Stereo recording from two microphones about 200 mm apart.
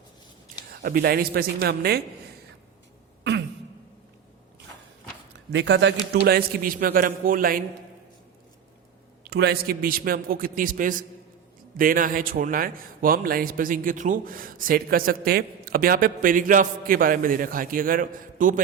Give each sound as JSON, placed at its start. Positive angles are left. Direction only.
{"t": 0.7, "sound": "a man's voice", "side_deg": -50}
{"t": 5.5, "sound": "a man's voice", "side_deg": -65}
{"t": 6.2, "sound": "a man's voice", "side_deg": -45}
{"t": 9.2, "sound": "a man's voice", "side_deg": -55}